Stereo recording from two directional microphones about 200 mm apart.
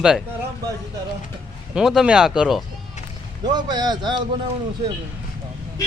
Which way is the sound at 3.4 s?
20° right (ahead or behind).